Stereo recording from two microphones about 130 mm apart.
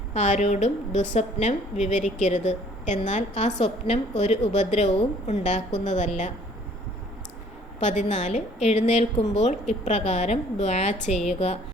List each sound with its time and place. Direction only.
0.1 s a woman's voice: 65° left (ahead or behind)
7.8 s a woman's voice: 65° left (ahead or behind)